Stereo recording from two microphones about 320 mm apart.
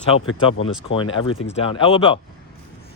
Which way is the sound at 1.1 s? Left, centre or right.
Left.